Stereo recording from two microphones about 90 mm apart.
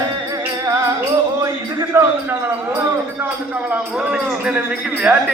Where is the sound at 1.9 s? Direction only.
25° right (ahead or behind).